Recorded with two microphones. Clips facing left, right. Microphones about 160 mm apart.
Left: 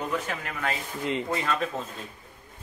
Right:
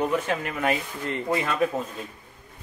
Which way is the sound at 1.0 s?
15° left (ahead or behind).